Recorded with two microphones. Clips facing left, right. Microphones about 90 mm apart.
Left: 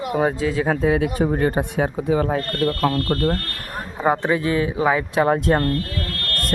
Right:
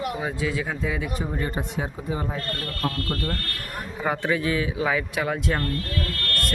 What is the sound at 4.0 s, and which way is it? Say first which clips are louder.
A man's voice: left 5 dB; 25° left (ahead or behind).